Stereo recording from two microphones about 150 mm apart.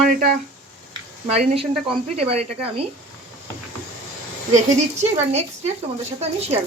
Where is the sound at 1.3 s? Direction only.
45° right (ahead or behind).